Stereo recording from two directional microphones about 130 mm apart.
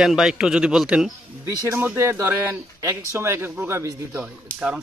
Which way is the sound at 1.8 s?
20° right (ahead or behind).